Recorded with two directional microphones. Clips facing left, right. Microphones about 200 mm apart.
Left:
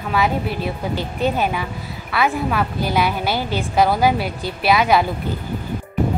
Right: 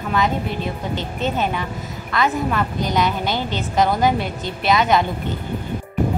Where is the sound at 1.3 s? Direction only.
10° left (ahead or behind).